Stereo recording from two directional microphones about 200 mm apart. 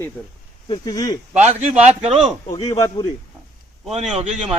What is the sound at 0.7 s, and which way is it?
Speech, 20° left (ahead or behind).